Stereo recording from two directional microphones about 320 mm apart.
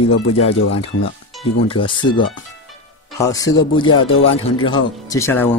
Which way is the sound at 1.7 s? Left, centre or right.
Centre.